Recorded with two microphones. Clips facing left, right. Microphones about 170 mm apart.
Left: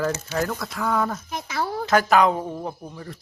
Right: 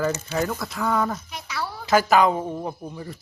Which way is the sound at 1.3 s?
50° left (ahead or behind).